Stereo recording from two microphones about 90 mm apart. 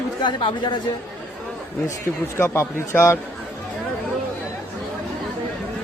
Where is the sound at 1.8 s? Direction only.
35° left (ahead or behind).